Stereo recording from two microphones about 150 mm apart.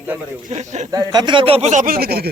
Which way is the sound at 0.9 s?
25° right (ahead or behind).